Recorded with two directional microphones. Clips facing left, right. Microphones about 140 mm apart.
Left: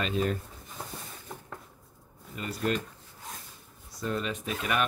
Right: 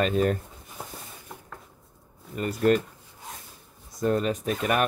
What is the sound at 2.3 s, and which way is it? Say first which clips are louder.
Speech: right 8 dB; 45° right (ahead or behind).